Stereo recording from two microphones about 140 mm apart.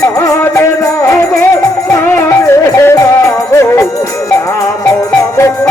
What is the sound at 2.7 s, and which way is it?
Music, 25° left (ahead or behind).